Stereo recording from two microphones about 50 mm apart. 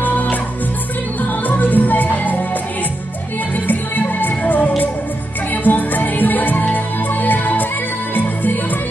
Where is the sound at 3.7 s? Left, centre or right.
Left.